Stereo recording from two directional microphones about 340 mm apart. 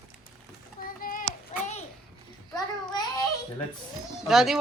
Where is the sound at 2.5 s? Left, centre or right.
Centre.